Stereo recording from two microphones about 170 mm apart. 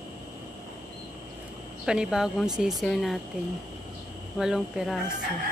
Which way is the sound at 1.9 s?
5° right (ahead or behind).